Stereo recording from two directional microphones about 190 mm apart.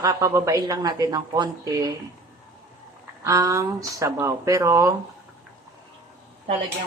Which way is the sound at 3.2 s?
15° right (ahead or behind).